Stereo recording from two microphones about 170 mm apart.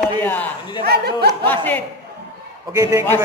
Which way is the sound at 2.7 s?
15° right (ahead or behind).